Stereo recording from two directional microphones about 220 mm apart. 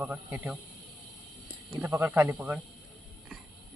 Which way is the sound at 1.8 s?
10° right (ahead or behind).